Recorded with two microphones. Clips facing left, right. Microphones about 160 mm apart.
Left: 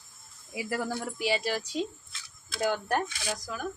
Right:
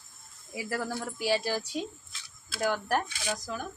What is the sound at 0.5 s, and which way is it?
Speech, 15° left (ahead or behind).